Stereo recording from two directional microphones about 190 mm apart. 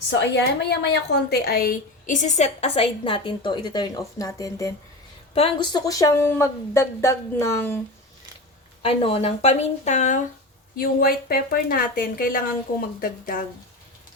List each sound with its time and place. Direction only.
0.1 s a woman's voice: 65° left (ahead or behind); by 4.7 s 15° left (ahead or behind)
5.3 s speech: 30° left (ahead or behind); by 7.8 s 15° left (ahead or behind)
8.8 s a woman's voice: 30° left (ahead or behind)
10.8 s a woman's voice: 50° left (ahead or behind)